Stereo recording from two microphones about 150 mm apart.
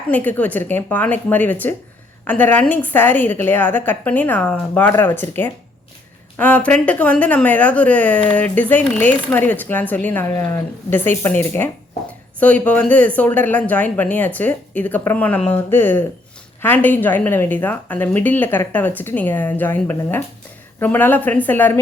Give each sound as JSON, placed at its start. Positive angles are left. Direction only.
{"t": 0.1, "sound": "speech", "side_deg": 10}